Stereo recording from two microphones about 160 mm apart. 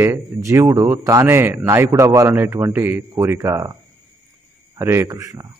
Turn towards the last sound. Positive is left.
turn(degrees=-20)  # may be behind; listen again after turning